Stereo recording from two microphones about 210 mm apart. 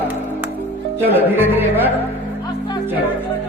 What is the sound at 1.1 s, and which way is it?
Speech, 10° right (ahead or behind).